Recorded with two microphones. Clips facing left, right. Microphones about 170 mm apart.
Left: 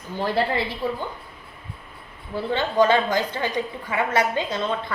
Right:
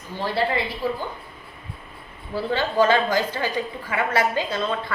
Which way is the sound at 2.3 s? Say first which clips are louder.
Even; 20° left (ahead or behind).